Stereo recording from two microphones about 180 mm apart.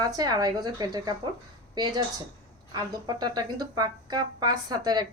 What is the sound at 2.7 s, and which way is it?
Speech, 20° right (ahead or behind).